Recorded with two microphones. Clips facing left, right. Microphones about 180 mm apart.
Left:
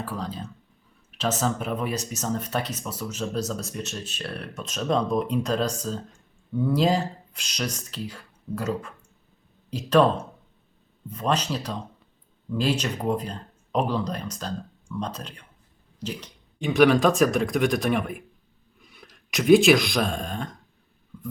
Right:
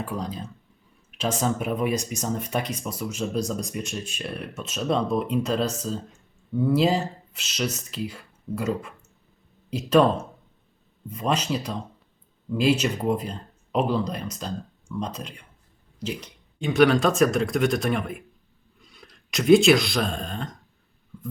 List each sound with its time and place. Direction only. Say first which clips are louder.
0.0 s speech: right 1 dB; 15° right (ahead or behind)
16.6 s speech: even; centre (ahead or behind)